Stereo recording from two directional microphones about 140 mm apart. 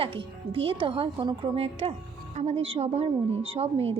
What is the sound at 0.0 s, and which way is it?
A woman's voice, 40° right (ahead or behind).